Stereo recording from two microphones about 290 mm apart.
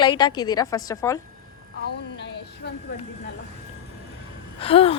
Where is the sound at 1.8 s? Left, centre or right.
Left.